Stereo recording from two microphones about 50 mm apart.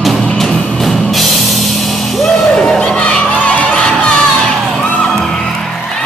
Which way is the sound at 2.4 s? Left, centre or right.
Centre.